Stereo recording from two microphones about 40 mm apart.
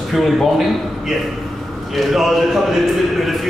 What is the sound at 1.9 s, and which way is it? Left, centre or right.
A man's voice, centre.